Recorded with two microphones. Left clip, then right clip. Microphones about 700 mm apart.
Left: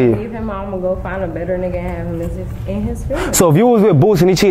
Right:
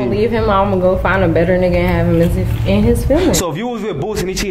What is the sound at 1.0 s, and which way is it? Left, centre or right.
Speech, right.